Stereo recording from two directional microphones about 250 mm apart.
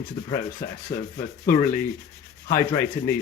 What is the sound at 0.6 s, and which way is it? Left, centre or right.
Speech, left.